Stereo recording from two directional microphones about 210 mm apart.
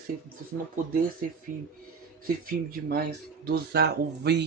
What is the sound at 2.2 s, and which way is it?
Speech, 45° right (ahead or behind).